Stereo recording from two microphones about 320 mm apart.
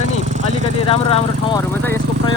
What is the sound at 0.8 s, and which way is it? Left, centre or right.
Speech, centre.